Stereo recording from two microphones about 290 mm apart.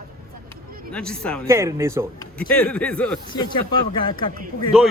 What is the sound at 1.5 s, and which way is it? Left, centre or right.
Speech, centre.